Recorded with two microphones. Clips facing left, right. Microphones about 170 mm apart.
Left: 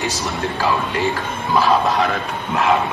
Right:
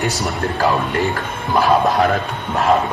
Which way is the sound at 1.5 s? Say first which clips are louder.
Right 2 dB; 45° right (ahead or behind).